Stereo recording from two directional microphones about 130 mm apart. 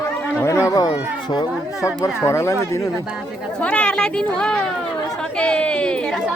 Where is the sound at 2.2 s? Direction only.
20° left (ahead or behind).